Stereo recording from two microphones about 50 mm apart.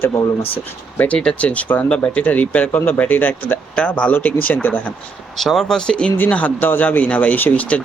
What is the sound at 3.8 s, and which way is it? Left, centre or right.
Speech, left.